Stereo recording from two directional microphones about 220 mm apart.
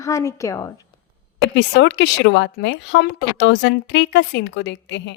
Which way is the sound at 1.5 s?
50° left (ahead or behind).